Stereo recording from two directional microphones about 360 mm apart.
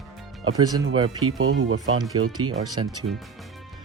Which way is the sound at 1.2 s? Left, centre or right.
Right.